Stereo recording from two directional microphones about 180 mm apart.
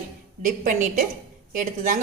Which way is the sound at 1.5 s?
45° right (ahead or behind).